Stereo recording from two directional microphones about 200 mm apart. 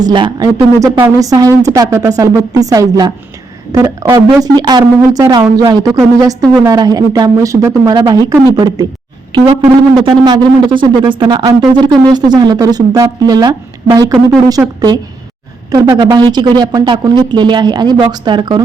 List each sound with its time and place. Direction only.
0.0 s speech: 20° right (ahead or behind)
16.0 s speech: 20° right (ahead or behind)